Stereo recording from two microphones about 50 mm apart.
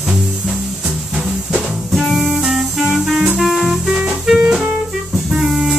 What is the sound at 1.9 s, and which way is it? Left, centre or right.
Music, centre.